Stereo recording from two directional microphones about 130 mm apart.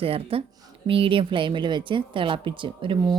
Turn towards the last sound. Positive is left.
turn(degrees=-40)  # may be behind; listen again after turning